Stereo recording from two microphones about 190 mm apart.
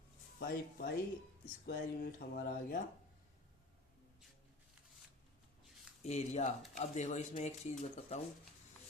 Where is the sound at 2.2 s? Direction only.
60° left (ahead or behind).